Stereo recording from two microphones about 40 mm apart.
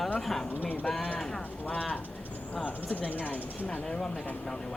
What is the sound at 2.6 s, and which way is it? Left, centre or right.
Speech, left.